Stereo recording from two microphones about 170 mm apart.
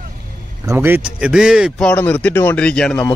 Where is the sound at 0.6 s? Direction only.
15° right (ahead or behind).